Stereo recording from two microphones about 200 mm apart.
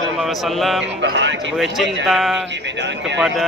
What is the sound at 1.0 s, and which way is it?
Speech, 65° right (ahead or behind).